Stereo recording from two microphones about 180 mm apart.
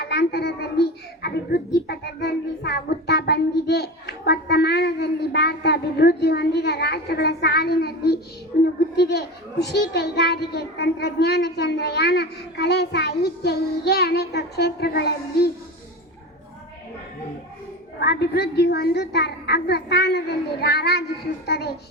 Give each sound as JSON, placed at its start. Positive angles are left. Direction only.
{"t": 0.0, "sound": "a child's voice", "side_deg": 65}
{"t": 18.0, "sound": "a child's voice", "side_deg": 65}